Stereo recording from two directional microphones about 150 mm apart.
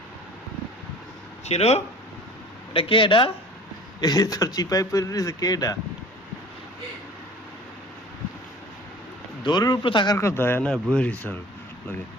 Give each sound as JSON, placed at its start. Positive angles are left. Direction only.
{"t": 1.5, "sound": "speech", "side_deg": 45}
{"t": 9.4, "sound": "speech", "side_deg": 30}
{"t": 10.2, "sound": "speech", "side_deg": 15}